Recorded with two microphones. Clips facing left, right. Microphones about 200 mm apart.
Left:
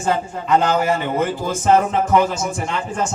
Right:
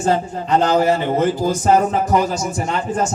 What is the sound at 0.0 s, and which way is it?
A man's voice, 35° right (ahead or behind).